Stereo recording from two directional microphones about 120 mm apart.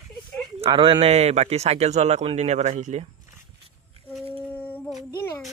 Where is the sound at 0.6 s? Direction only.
50° right (ahead or behind); by 3.1 s 80° right.